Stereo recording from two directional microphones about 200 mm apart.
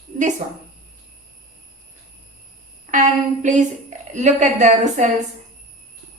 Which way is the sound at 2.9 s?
40° right (ahead or behind).